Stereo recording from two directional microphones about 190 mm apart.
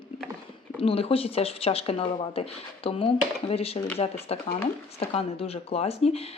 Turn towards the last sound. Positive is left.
turn(degrees=30)  # may be behind; listen again after turning